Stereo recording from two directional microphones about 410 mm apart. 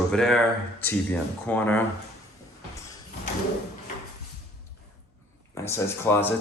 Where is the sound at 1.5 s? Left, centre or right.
Centre.